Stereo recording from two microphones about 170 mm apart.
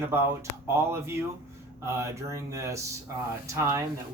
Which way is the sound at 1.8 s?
15° right (ahead or behind).